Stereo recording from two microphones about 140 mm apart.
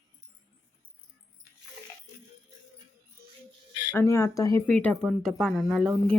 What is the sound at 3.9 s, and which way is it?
Speech, 20° left (ahead or behind).